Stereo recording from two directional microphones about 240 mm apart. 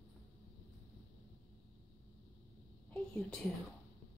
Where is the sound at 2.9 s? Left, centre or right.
Centre.